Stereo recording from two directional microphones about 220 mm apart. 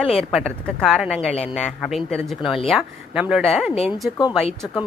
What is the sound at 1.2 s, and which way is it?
Speech, 30° left (ahead or behind).